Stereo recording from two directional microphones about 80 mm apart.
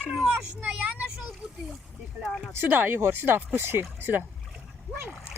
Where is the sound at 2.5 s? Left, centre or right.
Right.